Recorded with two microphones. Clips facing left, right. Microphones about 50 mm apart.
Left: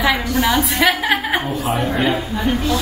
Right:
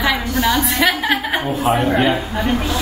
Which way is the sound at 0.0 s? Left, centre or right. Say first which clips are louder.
Left 1 dB; centre.